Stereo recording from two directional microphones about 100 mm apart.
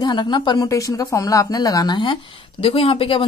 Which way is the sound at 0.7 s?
35° left (ahead or behind).